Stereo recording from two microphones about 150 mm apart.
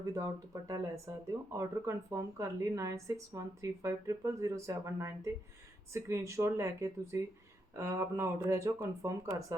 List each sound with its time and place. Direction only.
0.0 s a woman's voice: 20° right (ahead or behind)